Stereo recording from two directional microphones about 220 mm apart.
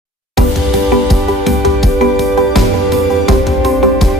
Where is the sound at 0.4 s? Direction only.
Centre (ahead or behind).